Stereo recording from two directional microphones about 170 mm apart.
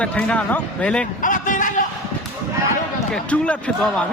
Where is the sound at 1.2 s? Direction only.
50° left (ahead or behind).